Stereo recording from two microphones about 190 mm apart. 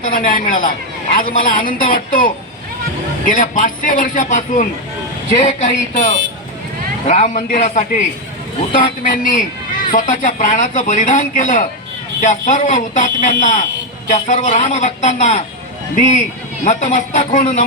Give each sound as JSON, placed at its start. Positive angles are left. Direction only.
{"t": 0.0, "sound": "a man's voice", "side_deg": 45}
{"t": 16.6, "sound": "a man's voice", "side_deg": 40}